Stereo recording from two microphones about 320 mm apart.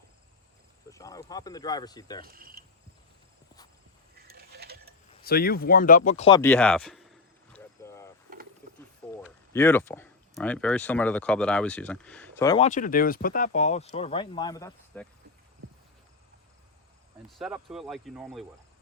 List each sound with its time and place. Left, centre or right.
0.9 s speech: centre
2.2 s speech: right
4.3 s ratchet: right
5.2 s speech: left
6.1 s a sound: centre
9.5 s speech: centre
12.6 s speech: left
17.2 s speech: centre